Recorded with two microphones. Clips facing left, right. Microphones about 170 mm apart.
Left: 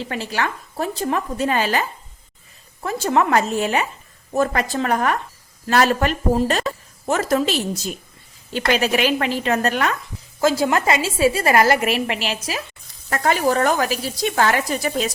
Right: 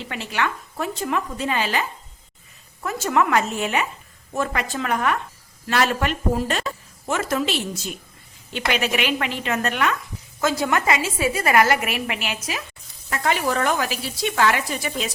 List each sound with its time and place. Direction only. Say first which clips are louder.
0.0 s a woman's voice: left 2 dB; 35° left (ahead or behind)
2.8 s a woman's voice: left 2 dB; 30° left (ahead or behind)